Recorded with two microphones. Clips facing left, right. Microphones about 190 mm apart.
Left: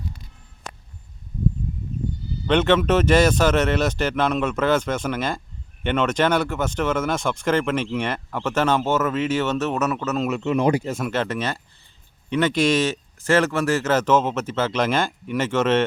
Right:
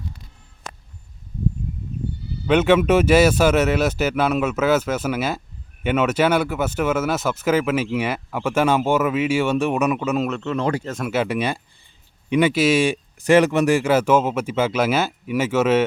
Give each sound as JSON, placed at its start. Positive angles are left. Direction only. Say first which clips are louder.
{"t": 2.5, "sound": "speech", "louder": "right 2 dB", "side_deg": -10}
{"t": 10.2, "sound": "speech", "louder": "left 3 dB", "side_deg": 10}
{"t": 11.0, "sound": "speech", "louder": "right 3 dB", "side_deg": -10}